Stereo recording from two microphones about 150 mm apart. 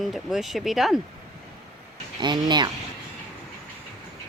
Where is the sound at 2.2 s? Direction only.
30° right (ahead or behind).